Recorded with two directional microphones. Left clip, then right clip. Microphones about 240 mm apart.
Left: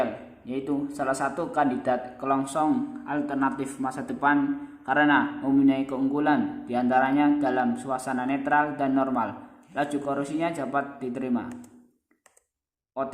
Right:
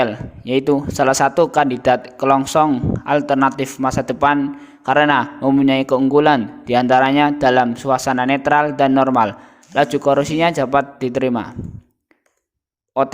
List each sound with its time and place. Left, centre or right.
0.0 s a man's voice: right
12.9 s speech: right